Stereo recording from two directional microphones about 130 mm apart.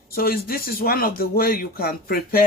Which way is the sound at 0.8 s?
90° left.